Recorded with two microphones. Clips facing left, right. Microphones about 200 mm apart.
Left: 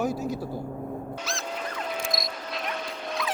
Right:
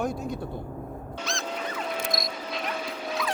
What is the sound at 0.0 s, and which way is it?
Speech, 5° left (ahead or behind).